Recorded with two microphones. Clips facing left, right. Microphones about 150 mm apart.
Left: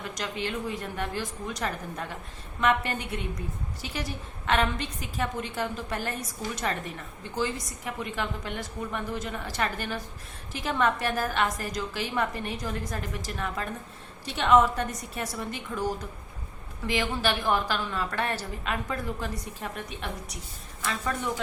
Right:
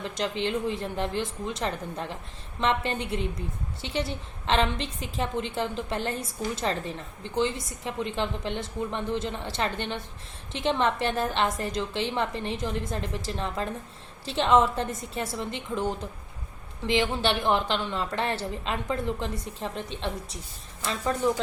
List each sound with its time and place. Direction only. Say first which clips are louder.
0.0 s a woman's voice: right 4 dB; 25° right (ahead or behind)